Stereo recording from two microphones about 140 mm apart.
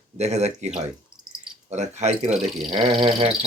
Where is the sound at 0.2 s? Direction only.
50° right (ahead or behind).